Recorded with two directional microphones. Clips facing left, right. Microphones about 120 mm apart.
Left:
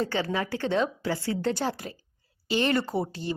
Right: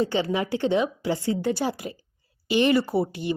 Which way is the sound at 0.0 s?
15° right (ahead or behind).